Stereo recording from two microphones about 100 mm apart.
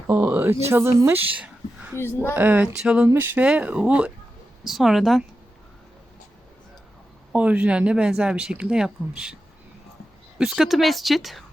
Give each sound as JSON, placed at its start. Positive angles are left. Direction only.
{"t": 0.1, "sound": "a woman's voice", "side_deg": -20}
{"t": 2.0, "sound": "speech", "side_deg": 25}
{"t": 2.2, "sound": "speech", "side_deg": -20}
{"t": 7.3, "sound": "speech", "side_deg": -15}
{"t": 10.3, "sound": "speech", "side_deg": -5}